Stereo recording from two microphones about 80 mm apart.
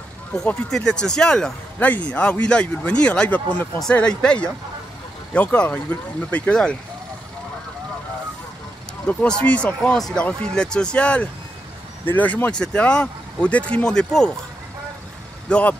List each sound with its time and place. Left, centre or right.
0.7 s speech: centre
9.0 s speech: centre
9.9 s speech: centre
15.4 s speech: centre